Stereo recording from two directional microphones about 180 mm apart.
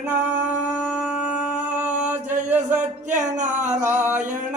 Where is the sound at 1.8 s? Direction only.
10° right (ahead or behind).